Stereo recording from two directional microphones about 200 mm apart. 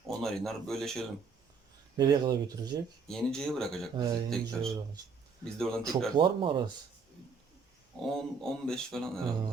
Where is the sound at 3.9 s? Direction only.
20° right (ahead or behind).